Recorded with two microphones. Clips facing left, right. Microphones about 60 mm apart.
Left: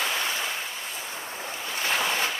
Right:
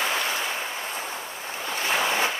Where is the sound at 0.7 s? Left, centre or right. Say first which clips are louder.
Right 4 dB; right.